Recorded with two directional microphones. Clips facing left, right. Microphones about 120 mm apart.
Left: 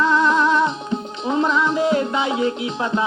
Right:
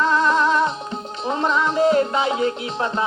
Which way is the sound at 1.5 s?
40° right (ahead or behind).